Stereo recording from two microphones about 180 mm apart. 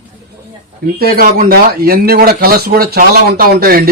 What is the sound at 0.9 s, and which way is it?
Speech, 60° right (ahead or behind).